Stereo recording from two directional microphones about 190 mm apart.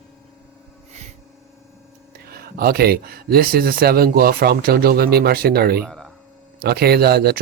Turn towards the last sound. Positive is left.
turn(degrees=-55)  # may be behind; listen again after turning